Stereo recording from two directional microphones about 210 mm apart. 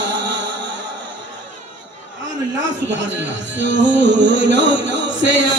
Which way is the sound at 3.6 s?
60° right (ahead or behind).